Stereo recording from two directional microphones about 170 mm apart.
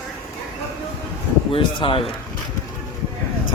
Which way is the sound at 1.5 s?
30° left (ahead or behind).